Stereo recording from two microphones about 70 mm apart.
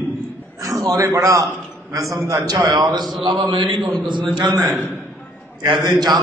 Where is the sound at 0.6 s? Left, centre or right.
Right.